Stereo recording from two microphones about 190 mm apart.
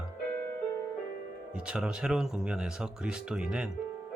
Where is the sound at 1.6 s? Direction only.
5° right (ahead or behind).